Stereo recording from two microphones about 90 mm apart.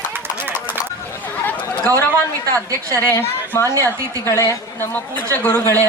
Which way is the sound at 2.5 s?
35° right (ahead or behind).